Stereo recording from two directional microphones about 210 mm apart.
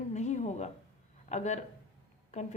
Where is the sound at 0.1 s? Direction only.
35° left (ahead or behind).